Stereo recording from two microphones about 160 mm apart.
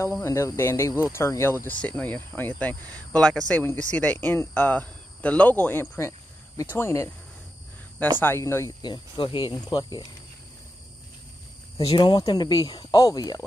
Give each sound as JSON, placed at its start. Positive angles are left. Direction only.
{"t": 0.0, "sound": "speech", "side_deg": 15}
{"t": 8.2, "sound": "speech", "side_deg": 15}
{"t": 8.8, "sound": "speech", "side_deg": 30}
{"t": 11.8, "sound": "speech", "side_deg": 30}